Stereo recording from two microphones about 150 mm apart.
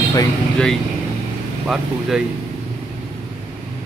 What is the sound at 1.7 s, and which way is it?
Speech, 5° right (ahead or behind).